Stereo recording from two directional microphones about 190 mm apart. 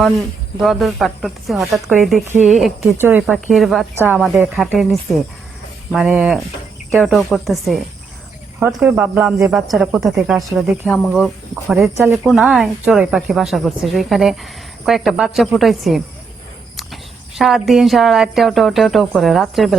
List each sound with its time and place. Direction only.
0.6 s speech: centre (ahead or behind)
3.9 s speech: 10° right (ahead or behind)
4.2 s speech: centre (ahead or behind)